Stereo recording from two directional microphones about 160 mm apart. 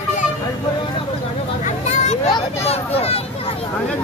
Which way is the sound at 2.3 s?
40° left (ahead or behind).